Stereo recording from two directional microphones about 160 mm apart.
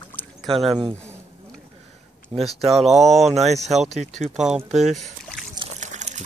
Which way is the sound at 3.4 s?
45° right (ahead or behind).